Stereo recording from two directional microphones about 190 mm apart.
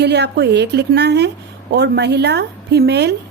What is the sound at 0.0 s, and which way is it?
A woman's voice, 60° right (ahead or behind).